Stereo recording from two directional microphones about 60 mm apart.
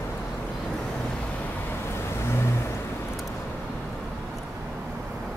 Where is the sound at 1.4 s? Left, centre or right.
Left.